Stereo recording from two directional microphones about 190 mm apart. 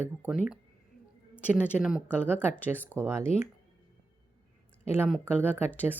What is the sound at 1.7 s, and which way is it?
Speech, 5° right (ahead or behind).